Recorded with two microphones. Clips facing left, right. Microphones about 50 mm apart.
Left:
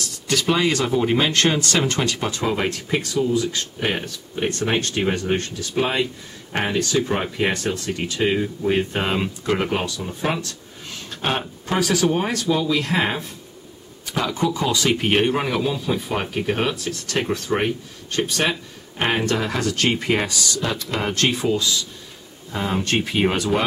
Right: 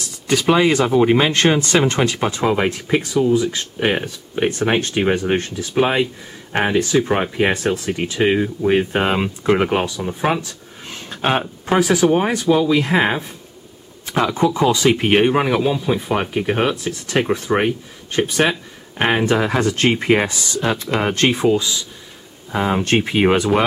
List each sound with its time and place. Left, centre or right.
0.3 s speech: centre